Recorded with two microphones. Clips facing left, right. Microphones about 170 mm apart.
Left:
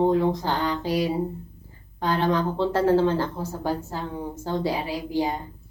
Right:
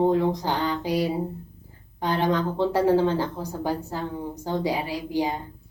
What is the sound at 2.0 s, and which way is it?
A woman's voice, 15° right (ahead or behind).